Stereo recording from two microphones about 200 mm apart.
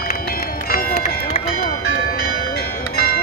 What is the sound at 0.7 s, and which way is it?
Run, 45° left (ahead or behind).